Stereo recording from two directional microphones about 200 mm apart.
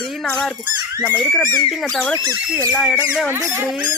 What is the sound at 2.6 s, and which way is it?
Speech, 5° left (ahead or behind).